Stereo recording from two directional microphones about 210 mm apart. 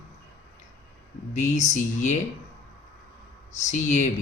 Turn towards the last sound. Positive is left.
turn(degrees=35)  # may be behind; listen again after turning